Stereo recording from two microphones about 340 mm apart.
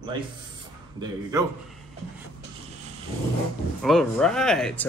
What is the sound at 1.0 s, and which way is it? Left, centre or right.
Speech, centre.